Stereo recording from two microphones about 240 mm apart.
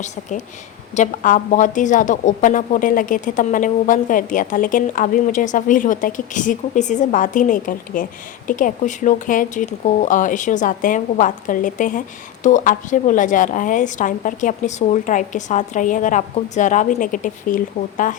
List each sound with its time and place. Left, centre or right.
0.0 s speech: left